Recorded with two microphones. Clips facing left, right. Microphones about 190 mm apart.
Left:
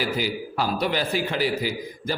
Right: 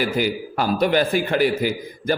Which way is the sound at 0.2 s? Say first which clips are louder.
Right 4 dB; 55° right (ahead or behind).